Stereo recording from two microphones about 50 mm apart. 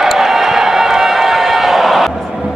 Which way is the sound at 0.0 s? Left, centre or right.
Centre.